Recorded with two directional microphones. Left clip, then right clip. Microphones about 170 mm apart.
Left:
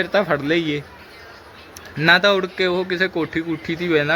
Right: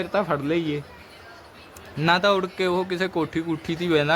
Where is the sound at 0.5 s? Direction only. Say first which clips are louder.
Left 5 dB; 75° right (ahead or behind).